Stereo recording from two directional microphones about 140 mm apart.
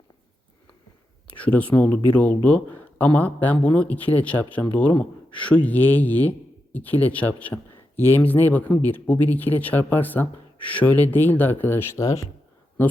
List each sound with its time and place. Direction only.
1.4 s speech: 10° left (ahead or behind)